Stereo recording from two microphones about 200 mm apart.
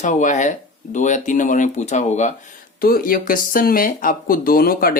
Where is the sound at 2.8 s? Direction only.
45° left (ahead or behind).